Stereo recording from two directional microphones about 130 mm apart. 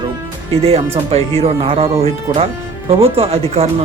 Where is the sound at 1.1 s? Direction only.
50° right (ahead or behind).